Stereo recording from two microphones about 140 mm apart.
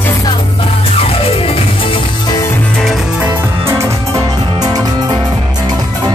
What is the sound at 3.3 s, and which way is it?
Music, 15° right (ahead or behind).